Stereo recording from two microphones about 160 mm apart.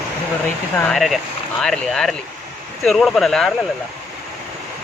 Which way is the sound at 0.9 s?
Centre (ahead or behind).